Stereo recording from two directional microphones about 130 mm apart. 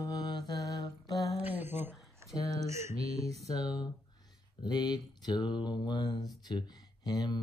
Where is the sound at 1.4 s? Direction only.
15° right (ahead or behind).